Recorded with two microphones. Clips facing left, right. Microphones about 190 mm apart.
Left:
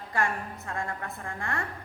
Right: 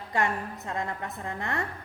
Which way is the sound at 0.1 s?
20° right (ahead or behind).